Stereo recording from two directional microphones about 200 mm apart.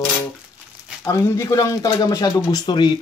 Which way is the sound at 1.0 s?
15° left (ahead or behind).